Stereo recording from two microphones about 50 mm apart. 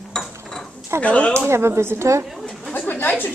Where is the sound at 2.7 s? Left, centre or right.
Left.